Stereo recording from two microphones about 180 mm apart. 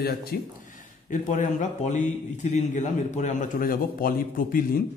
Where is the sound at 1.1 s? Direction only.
45° left (ahead or behind).